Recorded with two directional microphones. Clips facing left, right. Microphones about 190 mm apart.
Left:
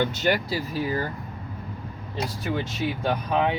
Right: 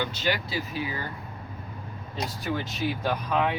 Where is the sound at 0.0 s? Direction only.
50° left (ahead or behind).